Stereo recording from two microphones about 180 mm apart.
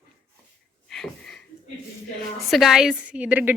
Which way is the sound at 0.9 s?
Centre (ahead or behind).